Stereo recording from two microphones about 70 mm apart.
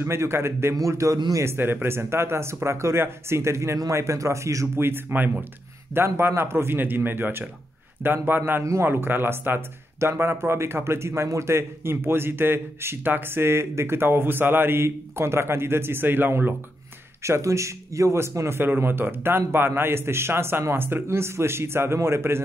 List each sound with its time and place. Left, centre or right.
0.0 s speech: right
0.7 s a man's voice: right
1.4 s a man's voice: right
4.7 s speech: right
17.2 s a man's voice: right
18.6 s speech: right